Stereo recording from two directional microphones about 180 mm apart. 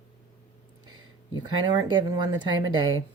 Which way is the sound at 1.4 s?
25° right (ahead or behind).